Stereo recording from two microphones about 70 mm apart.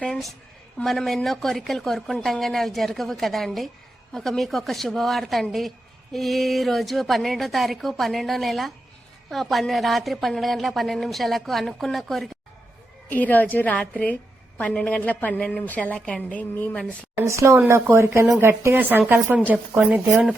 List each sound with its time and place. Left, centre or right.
0.0 s a woman's voice: centre
13.1 s a woman's voice: left
17.2 s a woman's voice: right